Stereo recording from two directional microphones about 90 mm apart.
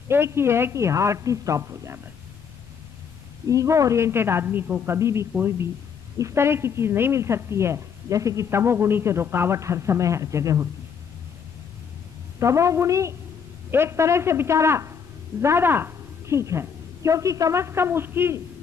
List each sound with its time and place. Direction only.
0.1 s a woman's voice: 30° right (ahead or behind)
3.4 s a woman's voice: 35° right (ahead or behind)
12.4 s a woman's voice: 35° right (ahead or behind)